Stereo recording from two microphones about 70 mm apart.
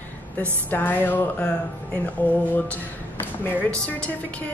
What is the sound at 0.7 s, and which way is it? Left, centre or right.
A woman's voice, left.